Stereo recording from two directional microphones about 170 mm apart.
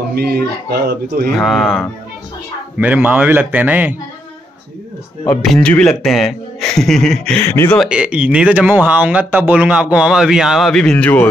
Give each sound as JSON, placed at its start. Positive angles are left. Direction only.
{"t": 0.1, "sound": "speech", "side_deg": -65}
{"t": 1.3, "sound": "a man's voice", "side_deg": 0}
{"t": 5.3, "sound": "a man's voice", "side_deg": 5}
{"t": 7.7, "sound": "speech", "side_deg": -5}